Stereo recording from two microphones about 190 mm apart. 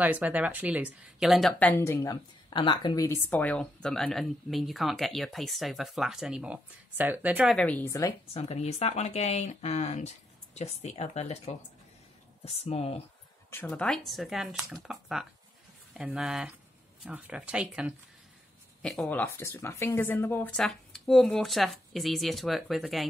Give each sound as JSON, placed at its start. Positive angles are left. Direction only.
{"t": 0.0, "sound": "speech", "side_deg": -10}
{"t": 3.3, "sound": "speech", "side_deg": 5}
{"t": 7.5, "sound": "a woman's voice", "side_deg": 10}
{"t": 8.3, "sound": "speech", "side_deg": 35}
{"t": 13.5, "sound": "speech", "side_deg": 10}